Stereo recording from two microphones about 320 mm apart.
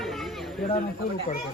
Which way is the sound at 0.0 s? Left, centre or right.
Centre.